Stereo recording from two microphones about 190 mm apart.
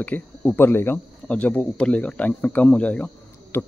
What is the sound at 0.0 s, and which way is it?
Speech, 5° left (ahead or behind).